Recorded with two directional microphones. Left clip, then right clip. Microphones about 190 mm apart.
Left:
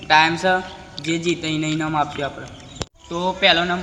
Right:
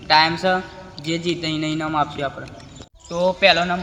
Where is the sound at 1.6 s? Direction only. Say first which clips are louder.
Even; 5° right (ahead or behind).